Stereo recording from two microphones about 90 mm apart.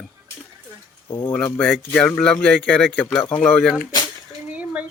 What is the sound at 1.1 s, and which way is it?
Speech, 60° left (ahead or behind).